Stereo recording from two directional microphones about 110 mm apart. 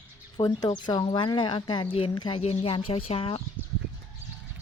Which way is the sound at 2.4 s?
65° left (ahead or behind).